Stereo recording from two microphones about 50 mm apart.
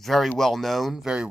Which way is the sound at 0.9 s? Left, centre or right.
Centre.